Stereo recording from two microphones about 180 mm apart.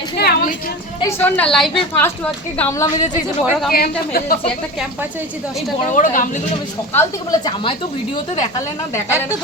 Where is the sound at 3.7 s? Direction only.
55° left (ahead or behind).